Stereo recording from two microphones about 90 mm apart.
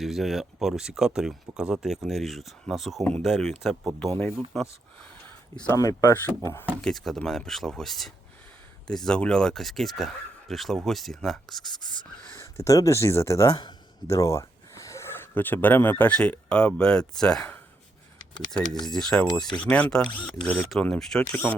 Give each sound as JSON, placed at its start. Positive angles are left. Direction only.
{"t": 0.0, "sound": "speech", "side_deg": 0}
{"t": 5.7, "sound": "speech", "side_deg": 40}
{"t": 6.2, "sound": "speech", "side_deg": 30}
{"t": 6.8, "sound": "speech", "side_deg": 0}
{"t": 12.3, "sound": "speech", "side_deg": 35}
{"t": 18.5, "sound": "speech", "side_deg": 5}